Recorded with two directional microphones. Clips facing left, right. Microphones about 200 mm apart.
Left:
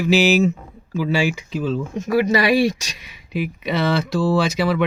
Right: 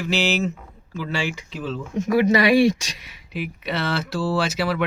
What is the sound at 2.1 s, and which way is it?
Speech, 20° right (ahead or behind).